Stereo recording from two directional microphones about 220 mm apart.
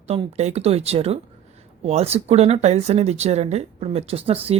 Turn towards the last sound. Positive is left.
turn(degrees=-25)  # may be behind; listen again after turning